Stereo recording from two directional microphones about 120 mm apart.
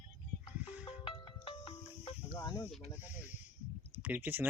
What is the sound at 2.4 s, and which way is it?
Speech, 25° left (ahead or behind).